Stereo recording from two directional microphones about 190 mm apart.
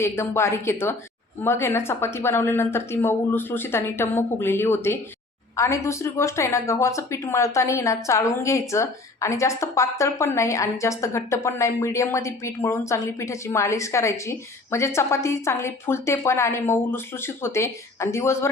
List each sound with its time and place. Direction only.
0.0 s speech: 15° left (ahead or behind)